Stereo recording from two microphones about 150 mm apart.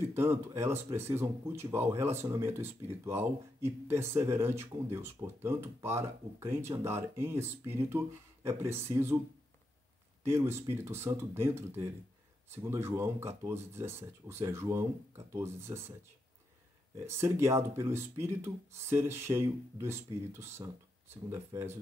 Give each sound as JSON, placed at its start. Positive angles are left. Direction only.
{"t": 0.1, "sound": "speech", "side_deg": -15}
{"t": 10.2, "sound": "speech", "side_deg": -15}
{"t": 16.9, "sound": "speech", "side_deg": -20}